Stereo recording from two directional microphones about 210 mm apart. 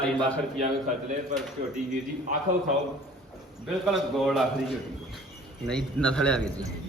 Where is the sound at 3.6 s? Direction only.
Centre (ahead or behind).